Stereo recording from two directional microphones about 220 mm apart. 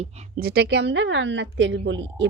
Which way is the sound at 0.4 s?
50° right (ahead or behind).